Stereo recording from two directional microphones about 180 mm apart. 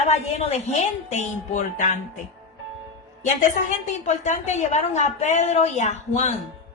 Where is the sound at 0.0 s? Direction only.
40° left (ahead or behind).